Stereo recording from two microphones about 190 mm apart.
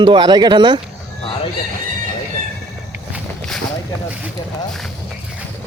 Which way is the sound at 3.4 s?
5° left (ahead or behind).